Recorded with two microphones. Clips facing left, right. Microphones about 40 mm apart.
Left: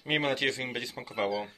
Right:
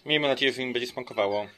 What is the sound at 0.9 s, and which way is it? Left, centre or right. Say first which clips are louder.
Speech: right 3 dB; centre.